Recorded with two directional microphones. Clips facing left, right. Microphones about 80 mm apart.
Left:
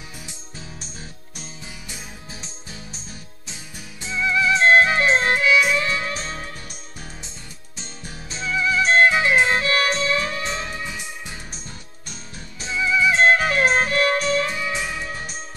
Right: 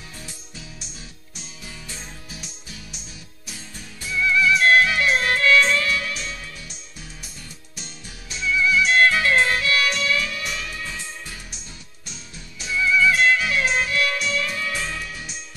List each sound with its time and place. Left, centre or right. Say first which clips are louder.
3.4 s music: right 1 dB; left
5.4 s music: even; centre
5.8 s music: left 1 dB; left
7.2 s music: left 1 dB; left
9.0 s music: left 1 dB; left
9.6 s music: left 2 dB; left
10.9 s music: left 1 dB; centre
12.6 s music: right 1 dB; left
13.2 s music: left 3 dB; left
14.5 s music: left 2 dB; centre
15.0 s music: left 4 dB; left